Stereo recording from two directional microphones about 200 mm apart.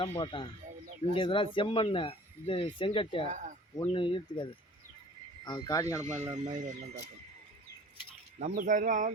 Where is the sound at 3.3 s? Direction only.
40° right (ahead or behind).